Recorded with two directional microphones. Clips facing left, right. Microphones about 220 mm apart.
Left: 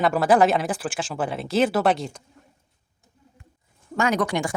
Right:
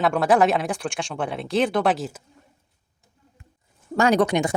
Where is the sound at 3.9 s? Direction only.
35° right (ahead or behind).